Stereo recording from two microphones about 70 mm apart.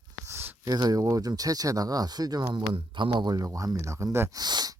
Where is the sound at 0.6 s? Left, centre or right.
Right.